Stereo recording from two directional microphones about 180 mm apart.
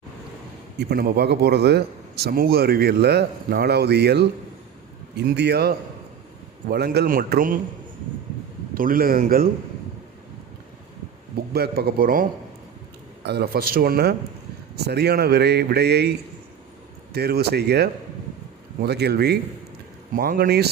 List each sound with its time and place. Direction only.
0.8 s a man's voice: 60° right (ahead or behind)
8.7 s a man's voice: 50° right (ahead or behind)
11.5 s a man's voice: 60° right (ahead or behind)
13.2 s a man's voice: 65° right (ahead or behind)